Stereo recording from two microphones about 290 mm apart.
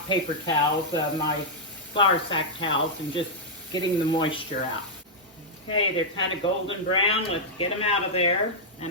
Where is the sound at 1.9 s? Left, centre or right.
Centre.